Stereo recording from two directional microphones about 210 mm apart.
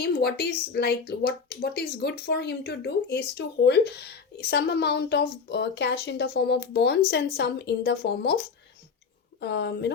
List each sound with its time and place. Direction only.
0.0 s speech: 50° left (ahead or behind)